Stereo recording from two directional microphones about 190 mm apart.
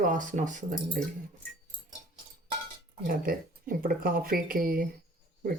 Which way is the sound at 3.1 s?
50° right (ahead or behind).